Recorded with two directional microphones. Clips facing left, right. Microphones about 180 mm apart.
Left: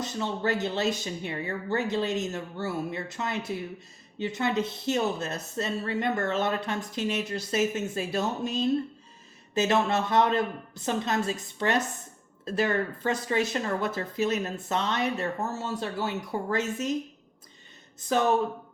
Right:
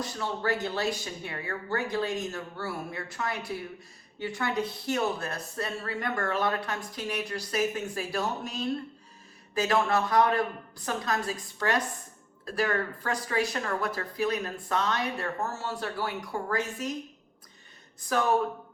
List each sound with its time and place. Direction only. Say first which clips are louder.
0.0 s a woman's voice: left 2 dB; 20° left (ahead or behind)
18.0 s a woman's voice: left 2 dB; 25° left (ahead or behind)